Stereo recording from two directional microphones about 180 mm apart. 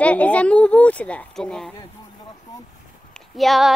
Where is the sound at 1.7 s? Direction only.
20° left (ahead or behind).